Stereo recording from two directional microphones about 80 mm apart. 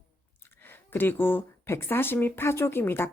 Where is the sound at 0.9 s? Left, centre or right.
Left.